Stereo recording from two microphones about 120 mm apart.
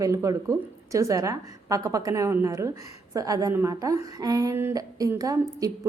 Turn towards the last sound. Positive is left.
turn(degrees=-30)  # may be behind; listen again after turning